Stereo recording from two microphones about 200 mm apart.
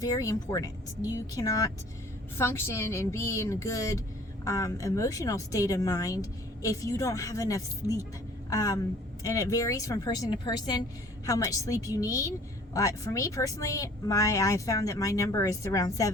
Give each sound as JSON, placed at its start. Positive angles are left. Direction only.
{"t": 0.0, "sound": "speech", "side_deg": 15}